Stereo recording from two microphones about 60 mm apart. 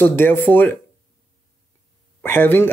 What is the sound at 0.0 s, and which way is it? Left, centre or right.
Speech, left.